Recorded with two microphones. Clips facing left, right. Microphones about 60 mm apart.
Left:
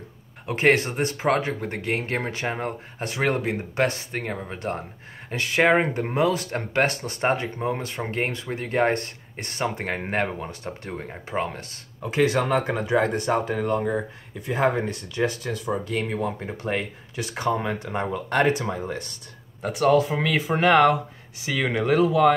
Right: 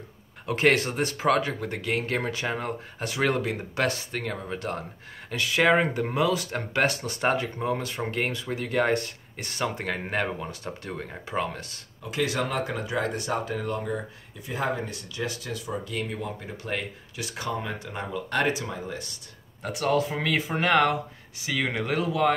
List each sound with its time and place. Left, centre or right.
0.5 s speech: left
14.4 s speech: left
19.6 s speech: left
21.5 s speech: left